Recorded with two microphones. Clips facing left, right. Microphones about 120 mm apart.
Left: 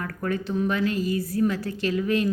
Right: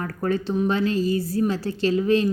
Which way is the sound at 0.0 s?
30° right (ahead or behind).